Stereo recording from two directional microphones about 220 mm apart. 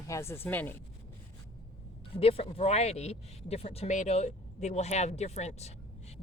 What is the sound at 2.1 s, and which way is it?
Speech, 25° left (ahead or behind).